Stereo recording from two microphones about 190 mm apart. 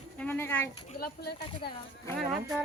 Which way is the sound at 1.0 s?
55° left (ahead or behind).